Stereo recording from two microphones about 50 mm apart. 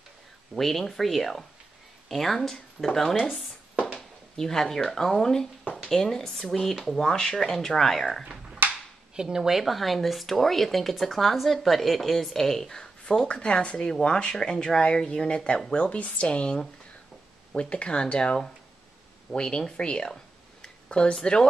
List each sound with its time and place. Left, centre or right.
0.6 s speech: centre
4.4 s speech: centre
8.6 s a sound: right
9.1 s speech: centre
13.3 s speech: left